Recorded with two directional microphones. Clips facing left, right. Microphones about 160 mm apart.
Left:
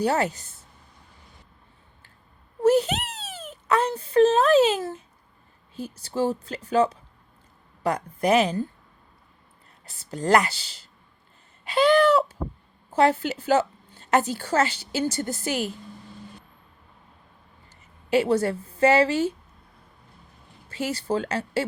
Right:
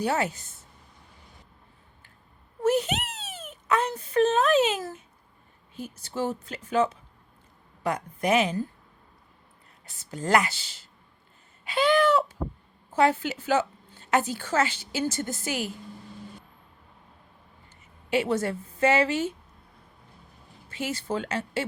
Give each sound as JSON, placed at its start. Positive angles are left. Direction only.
{"t": 0.0, "sound": "a woman's voice", "side_deg": 40}
{"t": 2.6, "sound": "a woman's voice", "side_deg": 35}
{"t": 9.8, "sound": "a woman's voice", "side_deg": 35}
{"t": 18.1, "sound": "a woman's voice", "side_deg": 35}
{"t": 20.7, "sound": "a woman's voice", "side_deg": 35}